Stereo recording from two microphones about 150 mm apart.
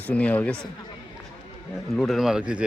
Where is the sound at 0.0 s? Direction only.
10° left (ahead or behind).